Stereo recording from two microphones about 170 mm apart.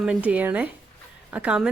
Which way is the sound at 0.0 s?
5° right (ahead or behind).